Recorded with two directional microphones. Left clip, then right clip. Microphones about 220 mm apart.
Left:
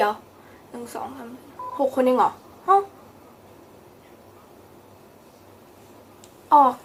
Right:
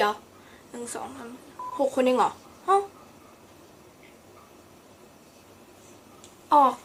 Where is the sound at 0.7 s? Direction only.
Centre (ahead or behind).